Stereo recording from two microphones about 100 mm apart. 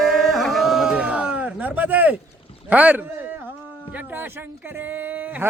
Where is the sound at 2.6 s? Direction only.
15° right (ahead or behind).